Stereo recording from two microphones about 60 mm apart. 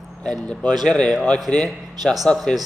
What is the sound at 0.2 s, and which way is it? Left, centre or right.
A man's voice, centre.